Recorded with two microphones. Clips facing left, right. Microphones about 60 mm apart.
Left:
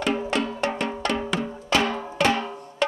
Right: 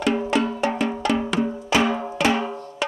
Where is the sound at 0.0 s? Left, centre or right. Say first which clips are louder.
Right 3 dB; centre.